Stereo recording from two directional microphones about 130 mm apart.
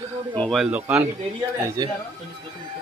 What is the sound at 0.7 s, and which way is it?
Speech, 10° right (ahead or behind).